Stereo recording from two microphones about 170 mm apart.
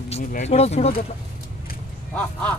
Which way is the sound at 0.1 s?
40° left (ahead or behind).